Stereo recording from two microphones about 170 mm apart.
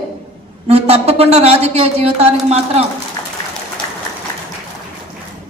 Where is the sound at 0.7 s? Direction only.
35° right (ahead or behind).